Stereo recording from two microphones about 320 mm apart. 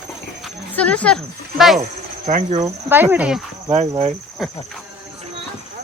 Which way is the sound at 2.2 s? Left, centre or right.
Right.